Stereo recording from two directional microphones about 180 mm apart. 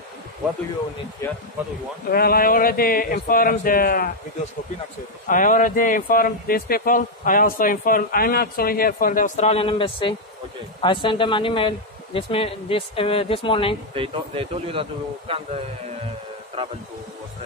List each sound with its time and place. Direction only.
1.2 s speech: 15° left (ahead or behind)
2.0 s speech: 55° left (ahead or behind)
5.3 s speech: 50° left (ahead or behind); by 13.7 s 30° left (ahead or behind)
13.9 s a man's voice: 30° right (ahead or behind)